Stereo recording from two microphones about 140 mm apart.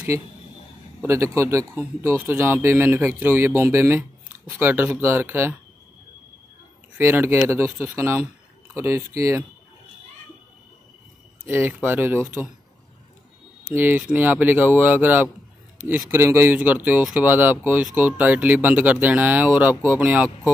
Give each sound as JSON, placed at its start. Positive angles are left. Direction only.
{"t": 1.0, "sound": "speech", "side_deg": -20}
{"t": 7.0, "sound": "speech", "side_deg": -15}
{"t": 11.4, "sound": "speech", "side_deg": -15}
{"t": 13.7, "sound": "speech", "side_deg": -10}